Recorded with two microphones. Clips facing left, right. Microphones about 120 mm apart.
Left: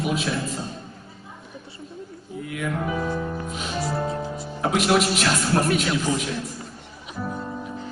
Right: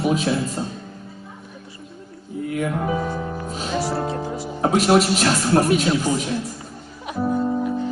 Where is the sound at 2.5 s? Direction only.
40° right (ahead or behind).